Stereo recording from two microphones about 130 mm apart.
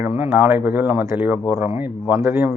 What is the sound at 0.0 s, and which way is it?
Speech, 15° right (ahead or behind).